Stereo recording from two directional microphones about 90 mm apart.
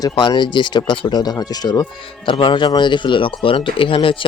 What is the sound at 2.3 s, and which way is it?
Speech, 60° left (ahead or behind).